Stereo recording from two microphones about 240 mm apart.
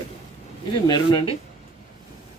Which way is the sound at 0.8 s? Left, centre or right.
Centre.